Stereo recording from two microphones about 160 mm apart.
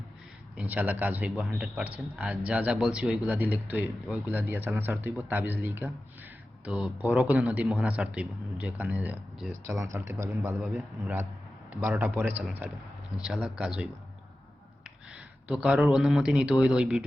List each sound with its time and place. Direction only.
0.5 s speech: 10° right (ahead or behind)
6.7 s a man's voice: centre (ahead or behind)
9.6 s speech: 20° right (ahead or behind)
10.6 s a man's voice: 5° right (ahead or behind)
11.8 s a man's voice: 15° right (ahead or behind)